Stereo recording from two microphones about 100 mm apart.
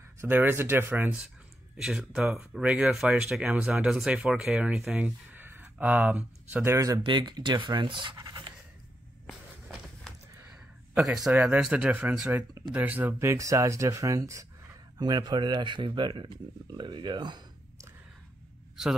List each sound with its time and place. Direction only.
0.2 s speech: 20° right (ahead or behind)
1.8 s speech: 5° right (ahead or behind); by 6.8 s 20° right (ahead or behind)
7.0 s speech: 50° right (ahead or behind)
8.3 s pant: 50° right (ahead or behind)
10.5 s a sound: 5° right (ahead or behind)
11.4 s speech: 10° right (ahead or behind)
13.2 s speech: 30° right (ahead or behind)
15.0 s speech: 45° right (ahead or behind)